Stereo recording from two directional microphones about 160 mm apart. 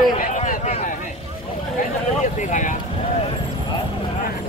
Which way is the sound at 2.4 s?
50° left (ahead or behind).